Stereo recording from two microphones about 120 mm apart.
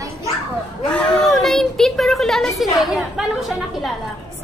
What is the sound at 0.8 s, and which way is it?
A woman's voice, 5° left (ahead or behind).